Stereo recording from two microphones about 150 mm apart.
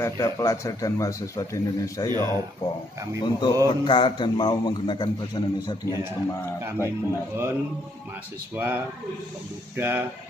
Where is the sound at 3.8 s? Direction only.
30° left (ahead or behind).